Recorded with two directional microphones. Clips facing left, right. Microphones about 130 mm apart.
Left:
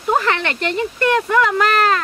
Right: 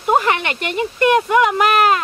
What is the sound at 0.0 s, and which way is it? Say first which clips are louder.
Speech: right 2 dB; 15° right (ahead or behind).